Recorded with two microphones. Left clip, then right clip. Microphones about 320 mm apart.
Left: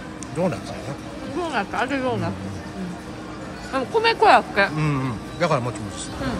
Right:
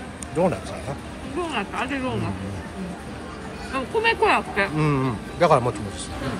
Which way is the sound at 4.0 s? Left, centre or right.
Centre.